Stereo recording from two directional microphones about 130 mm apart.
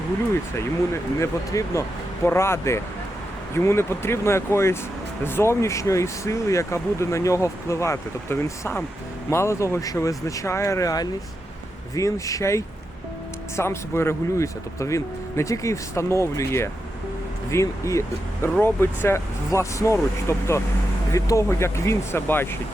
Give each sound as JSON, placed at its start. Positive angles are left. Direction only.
{"t": 1.2, "sound": "speech", "side_deg": 25}